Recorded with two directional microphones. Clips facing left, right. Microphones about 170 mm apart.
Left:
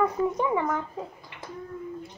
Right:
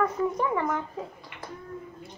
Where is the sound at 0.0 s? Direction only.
10° left (ahead or behind).